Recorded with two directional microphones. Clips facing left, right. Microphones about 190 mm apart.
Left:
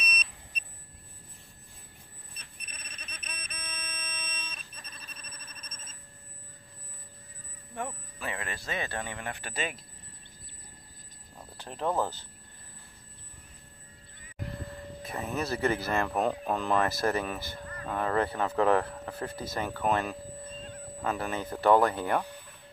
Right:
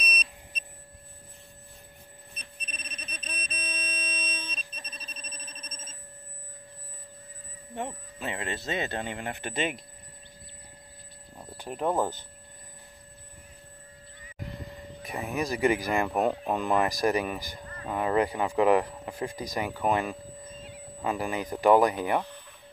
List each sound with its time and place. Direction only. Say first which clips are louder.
2.7 s a sound: right 5 dB; 25° right (ahead or behind)
7.7 s speech: right 2 dB; 25° right (ahead or behind)
11.5 s speech: right 3 dB; 10° right (ahead or behind)
15.0 s speech: right 2 dB; 15° right (ahead or behind)